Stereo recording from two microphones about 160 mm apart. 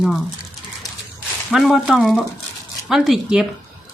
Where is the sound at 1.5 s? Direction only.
Centre (ahead or behind).